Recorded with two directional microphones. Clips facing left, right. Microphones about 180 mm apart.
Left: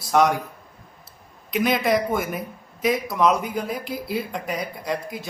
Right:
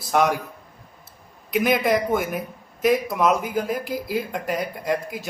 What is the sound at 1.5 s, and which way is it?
A man's voice, 5° right (ahead or behind).